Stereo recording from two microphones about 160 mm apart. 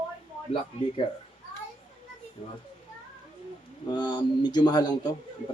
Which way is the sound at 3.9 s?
30° left (ahead or behind).